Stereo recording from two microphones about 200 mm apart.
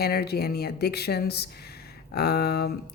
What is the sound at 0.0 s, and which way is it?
Speech, 50° left (ahead or behind).